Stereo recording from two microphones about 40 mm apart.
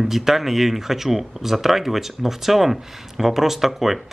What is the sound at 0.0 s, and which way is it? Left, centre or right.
Speech, centre.